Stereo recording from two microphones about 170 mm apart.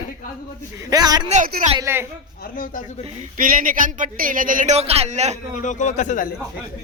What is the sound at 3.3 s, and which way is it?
Speech, 55° right (ahead or behind).